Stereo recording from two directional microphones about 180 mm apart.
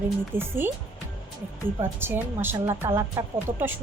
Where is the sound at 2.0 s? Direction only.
10° right (ahead or behind).